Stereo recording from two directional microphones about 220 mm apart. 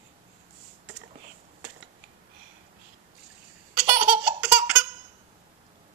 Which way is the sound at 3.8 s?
5° right (ahead or behind).